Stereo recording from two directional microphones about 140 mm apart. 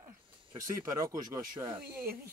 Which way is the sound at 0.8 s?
20° right (ahead or behind).